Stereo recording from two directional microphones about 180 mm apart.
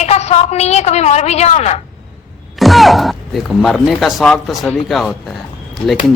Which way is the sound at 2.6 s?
Centre (ahead or behind).